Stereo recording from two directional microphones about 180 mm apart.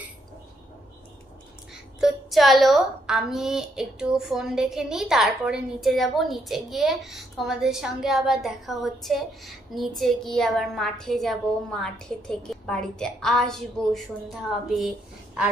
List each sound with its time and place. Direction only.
2.0 s a woman's voice: centre (ahead or behind)